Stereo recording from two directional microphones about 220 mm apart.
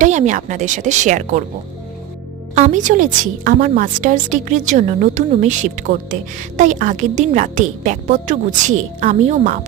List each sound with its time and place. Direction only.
0.0 s a woman's voice: 35° right (ahead or behind)
2.6 s a woman's voice: 35° right (ahead or behind)